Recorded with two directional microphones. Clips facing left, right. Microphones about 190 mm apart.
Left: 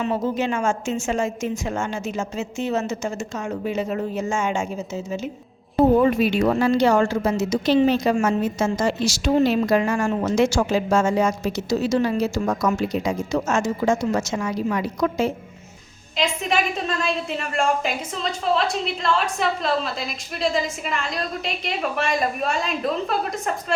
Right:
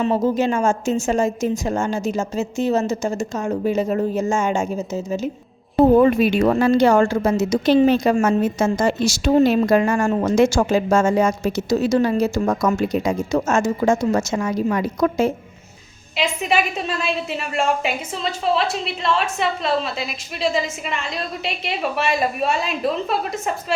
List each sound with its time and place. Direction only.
0.0 s a woman's voice: 40° right (ahead or behind)
6.0 s a woman's voice: 55° right (ahead or behind)
16.1 s a woman's voice: 10° right (ahead or behind)